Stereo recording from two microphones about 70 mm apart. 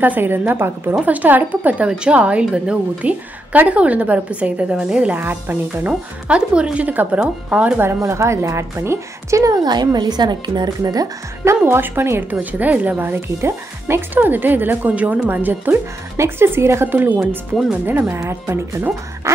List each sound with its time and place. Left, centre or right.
0.0 s speech: right
5.2 s speech: right
8.0 s a woman's voice: right
9.6 s speech: right
10.8 s speech: right
11.4 s speech: right
18.0 s a woman's voice: right